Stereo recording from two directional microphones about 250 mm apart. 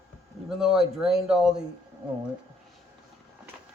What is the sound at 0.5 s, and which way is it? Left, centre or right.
Speech, centre.